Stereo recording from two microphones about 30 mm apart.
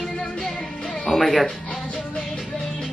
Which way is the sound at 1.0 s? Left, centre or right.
Centre.